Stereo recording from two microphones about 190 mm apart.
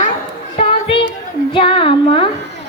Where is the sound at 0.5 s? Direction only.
30° left (ahead or behind).